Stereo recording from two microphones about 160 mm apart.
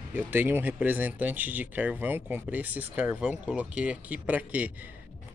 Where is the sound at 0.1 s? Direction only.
15° right (ahead or behind).